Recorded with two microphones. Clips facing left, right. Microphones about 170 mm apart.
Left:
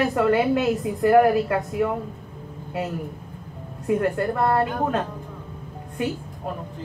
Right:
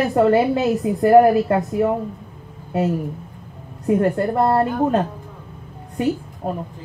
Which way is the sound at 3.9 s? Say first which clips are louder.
Right 5 dB; 30° right (ahead or behind).